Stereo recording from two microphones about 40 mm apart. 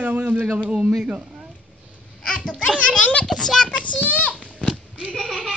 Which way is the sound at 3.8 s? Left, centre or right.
Left.